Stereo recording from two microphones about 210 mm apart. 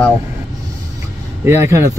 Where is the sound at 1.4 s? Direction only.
15° right (ahead or behind).